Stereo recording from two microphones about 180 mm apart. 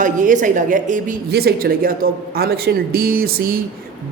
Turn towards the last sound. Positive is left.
turn(degrees=-55)  # may be behind; listen again after turning